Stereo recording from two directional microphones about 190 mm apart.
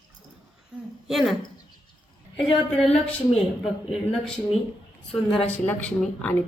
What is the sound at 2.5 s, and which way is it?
Speech, 5° left (ahead or behind).